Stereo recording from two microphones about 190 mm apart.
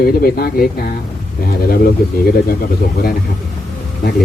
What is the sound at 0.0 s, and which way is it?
Speech, 50° left (ahead or behind).